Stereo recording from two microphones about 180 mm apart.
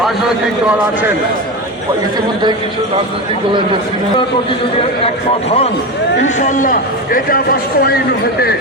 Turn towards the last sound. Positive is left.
turn(degrees=55)  # may be behind; listen again after turning